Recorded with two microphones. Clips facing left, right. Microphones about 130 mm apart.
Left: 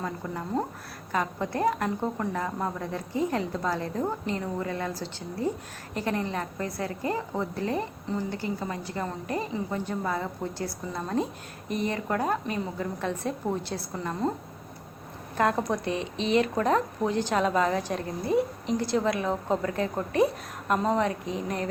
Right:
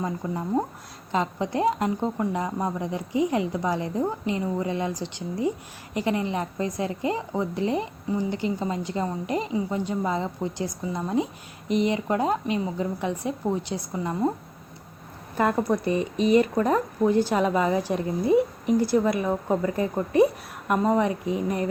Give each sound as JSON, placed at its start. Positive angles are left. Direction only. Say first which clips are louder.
{"t": 0.0, "sound": "a woman's voice", "louder": "right 4 dB", "side_deg": -15}
{"t": 15.4, "sound": "a woman's voice", "louder": "right 3 dB", "side_deg": -5}